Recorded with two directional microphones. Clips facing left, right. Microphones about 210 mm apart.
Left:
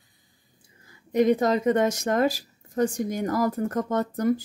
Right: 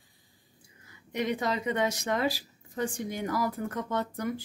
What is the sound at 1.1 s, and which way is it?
A woman's voice, 45° left (ahead or behind).